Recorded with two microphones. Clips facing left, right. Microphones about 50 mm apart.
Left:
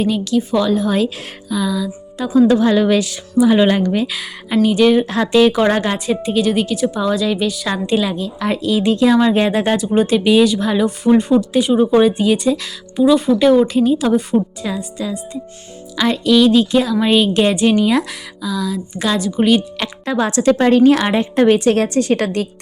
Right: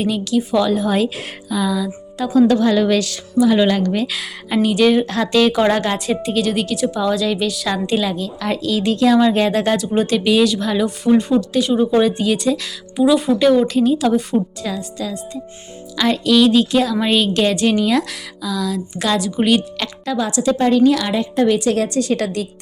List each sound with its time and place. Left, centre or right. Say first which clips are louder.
0.0 s a woman's voice: left 2 dB; centre
2.5 s a woman's voice: left 2 dB; centre
20.1 s a woman's voice: left 4 dB; left